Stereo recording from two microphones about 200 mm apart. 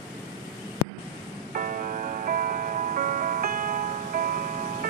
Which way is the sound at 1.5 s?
40° right (ahead or behind).